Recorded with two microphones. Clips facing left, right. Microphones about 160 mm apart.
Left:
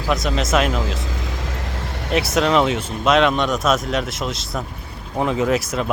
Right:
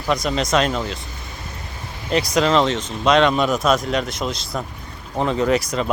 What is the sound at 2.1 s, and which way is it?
Speech, centre (ahead or behind).